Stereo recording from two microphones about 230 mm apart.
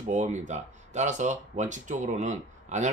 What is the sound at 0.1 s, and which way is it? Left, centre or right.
Speech, right.